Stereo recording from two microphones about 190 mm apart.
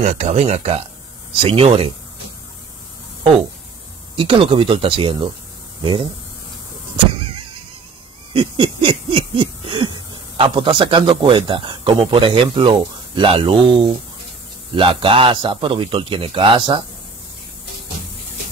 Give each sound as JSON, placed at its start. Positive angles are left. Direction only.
{"t": 0.0, "sound": "a man's voice", "side_deg": -40}
{"t": 4.1, "sound": "a man's voice", "side_deg": -25}
{"t": 8.3, "sound": "a sound", "side_deg": -30}
{"t": 14.7, "sound": "a man's voice", "side_deg": -25}